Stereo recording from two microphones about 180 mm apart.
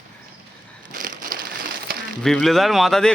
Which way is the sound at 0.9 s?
50° right (ahead or behind).